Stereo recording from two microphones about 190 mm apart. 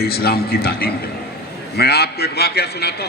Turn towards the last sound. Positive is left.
turn(degrees=60)  # may be behind; listen again after turning